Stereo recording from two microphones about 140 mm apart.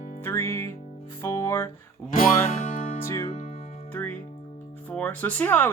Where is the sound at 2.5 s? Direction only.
60° left (ahead or behind).